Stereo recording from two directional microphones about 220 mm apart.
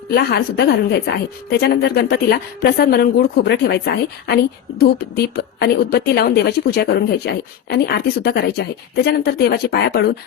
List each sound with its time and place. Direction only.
0.1 s a woman's voice: 45° left (ahead or behind)